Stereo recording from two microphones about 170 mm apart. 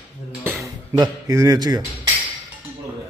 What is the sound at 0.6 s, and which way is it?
Speech, 20° right (ahead or behind).